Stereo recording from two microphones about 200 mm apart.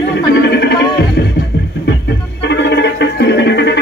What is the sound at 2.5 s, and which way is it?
Music, 60° left (ahead or behind).